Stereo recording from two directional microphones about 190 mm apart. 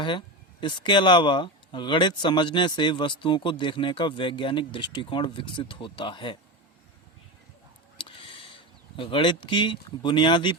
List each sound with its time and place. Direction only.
0.0 s speech: 25° left (ahead or behind)
7.9 s speech: 25° left (ahead or behind)